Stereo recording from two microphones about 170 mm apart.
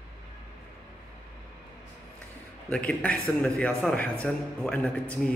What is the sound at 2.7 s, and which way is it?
A man's voice, 5° left (ahead or behind).